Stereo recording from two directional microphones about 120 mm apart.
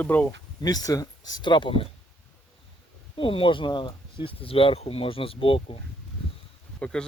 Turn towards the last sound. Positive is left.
turn(degrees=10)  # may be behind; listen again after turning